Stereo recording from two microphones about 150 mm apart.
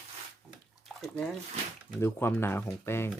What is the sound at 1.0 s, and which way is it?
Speech, 10° left (ahead or behind).